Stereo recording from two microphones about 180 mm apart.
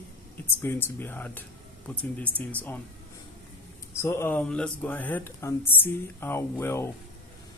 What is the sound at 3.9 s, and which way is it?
Speech, 15° left (ahead or behind).